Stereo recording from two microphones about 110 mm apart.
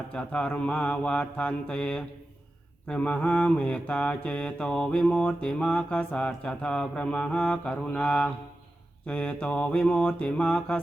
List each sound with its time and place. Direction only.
0.1 s mantra: 10° left (ahead or behind)